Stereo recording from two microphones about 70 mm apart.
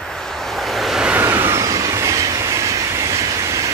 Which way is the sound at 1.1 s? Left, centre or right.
Right.